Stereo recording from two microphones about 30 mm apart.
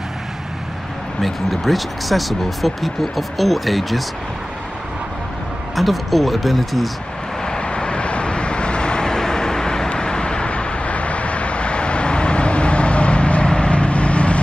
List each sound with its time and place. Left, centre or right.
1.2 s speech: centre
5.8 s speech: centre
7.4 s vehicle: left